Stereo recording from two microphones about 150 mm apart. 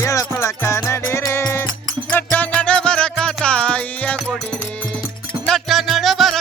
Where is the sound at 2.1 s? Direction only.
10° left (ahead or behind).